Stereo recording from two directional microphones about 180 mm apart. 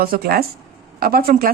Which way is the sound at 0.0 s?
55° right (ahead or behind).